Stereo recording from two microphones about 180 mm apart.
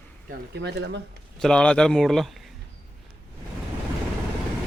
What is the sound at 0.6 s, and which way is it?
Speech, 75° right (ahead or behind).